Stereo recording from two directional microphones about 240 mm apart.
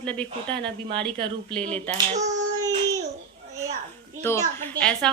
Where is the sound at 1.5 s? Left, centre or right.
Centre.